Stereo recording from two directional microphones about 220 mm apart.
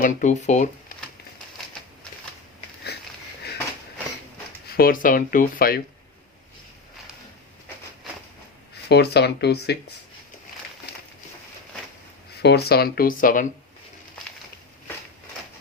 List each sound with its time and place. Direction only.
0.0 s speech: 35° left (ahead or behind)
4.6 s speech: 40° left (ahead or behind)
8.9 s speech: 50° left (ahead or behind)
12.4 s speech: 45° left (ahead or behind)